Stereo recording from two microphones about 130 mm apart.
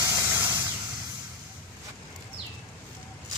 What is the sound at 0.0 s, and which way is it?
Vehicle, 25° right (ahead or behind).